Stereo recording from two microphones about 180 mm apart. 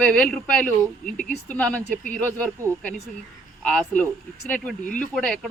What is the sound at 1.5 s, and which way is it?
Speech, 5° left (ahead or behind).